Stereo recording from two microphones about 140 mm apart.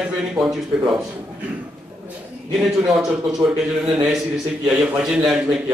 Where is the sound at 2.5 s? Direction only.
5° right (ahead or behind).